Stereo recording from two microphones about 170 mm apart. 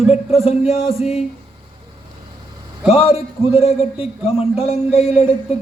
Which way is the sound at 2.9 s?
35° left (ahead or behind).